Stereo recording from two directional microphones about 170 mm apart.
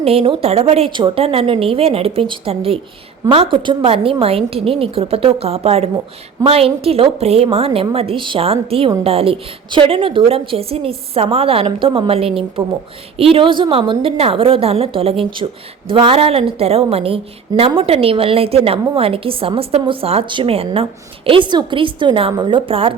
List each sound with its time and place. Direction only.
0.0 s a woman's voice: 35° right (ahead or behind)